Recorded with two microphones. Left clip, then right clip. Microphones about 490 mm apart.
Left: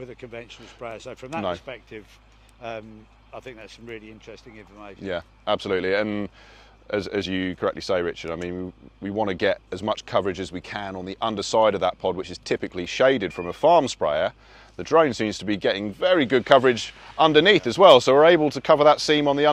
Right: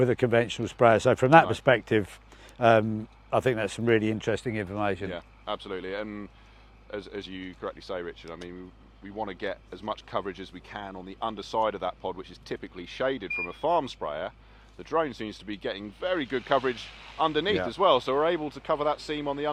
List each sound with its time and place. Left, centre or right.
0.0 s speech: right
5.1 s speech: left